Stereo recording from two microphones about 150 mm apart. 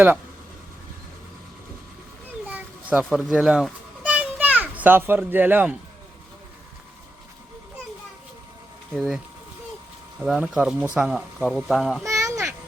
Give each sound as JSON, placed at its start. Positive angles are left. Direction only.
{"t": 2.5, "sound": "children playing", "side_deg": -5}
{"t": 8.9, "sound": "speech", "side_deg": -5}
{"t": 12.0, "sound": "a sound", "side_deg": -20}